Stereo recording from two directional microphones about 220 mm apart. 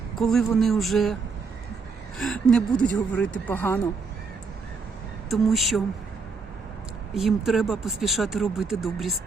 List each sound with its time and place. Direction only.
0.2 s speech: centre (ahead or behind)
2.1 s speech: centre (ahead or behind)
5.3 s speech: centre (ahead or behind)
7.1 s speech: centre (ahead or behind)